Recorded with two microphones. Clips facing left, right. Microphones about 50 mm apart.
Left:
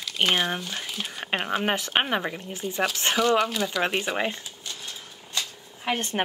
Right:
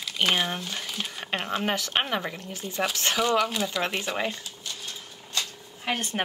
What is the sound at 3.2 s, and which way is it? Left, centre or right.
Speech, centre.